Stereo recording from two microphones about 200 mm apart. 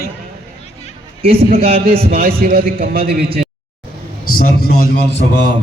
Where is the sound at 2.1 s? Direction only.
50° right (ahead or behind).